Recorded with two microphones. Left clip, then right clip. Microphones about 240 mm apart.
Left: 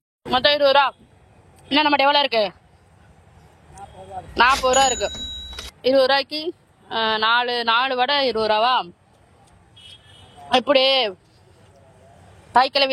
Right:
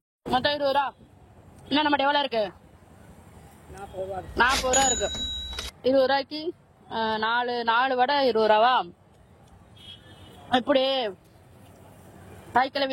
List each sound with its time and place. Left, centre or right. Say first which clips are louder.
0.3 s speech: left 8 dB; centre
4.4 s speech: left 6 dB; centre
10.5 s speech: left 6 dB; centre
12.5 s speech: left 7 dB; centre